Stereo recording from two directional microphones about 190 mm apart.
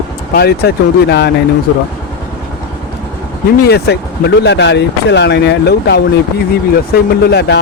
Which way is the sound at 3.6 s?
60° left (ahead or behind).